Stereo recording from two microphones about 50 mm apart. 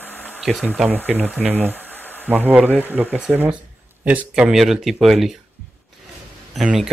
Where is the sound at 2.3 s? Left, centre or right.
Right.